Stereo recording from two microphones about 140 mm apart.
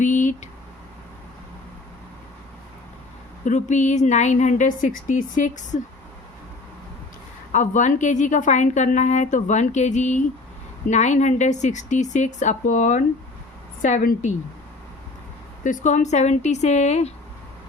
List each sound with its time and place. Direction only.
0.0 s a sound: 65° left (ahead or behind)
3.4 s a woman's voice: 60° left (ahead or behind)
7.5 s a woman's voice: 60° left (ahead or behind)
13.8 s a woman's voice: 75° left (ahead or behind)
15.6 s a woman's voice: 60° left (ahead or behind)